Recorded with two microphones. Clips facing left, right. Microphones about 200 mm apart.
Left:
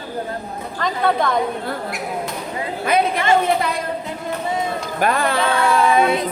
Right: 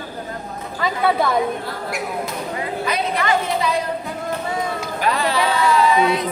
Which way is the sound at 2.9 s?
55° left (ahead or behind).